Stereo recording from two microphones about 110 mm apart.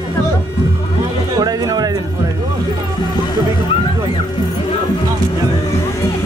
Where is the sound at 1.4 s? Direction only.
35° right (ahead or behind).